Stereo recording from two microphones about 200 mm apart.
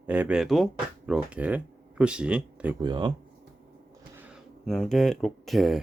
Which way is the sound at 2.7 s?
20° right (ahead or behind).